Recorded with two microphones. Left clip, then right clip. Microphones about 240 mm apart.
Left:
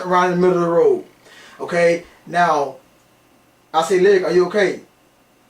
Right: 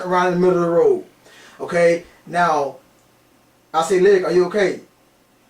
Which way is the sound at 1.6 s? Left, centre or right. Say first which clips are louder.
Even; centre.